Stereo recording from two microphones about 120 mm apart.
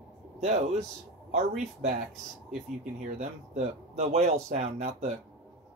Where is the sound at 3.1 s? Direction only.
70° right (ahead or behind).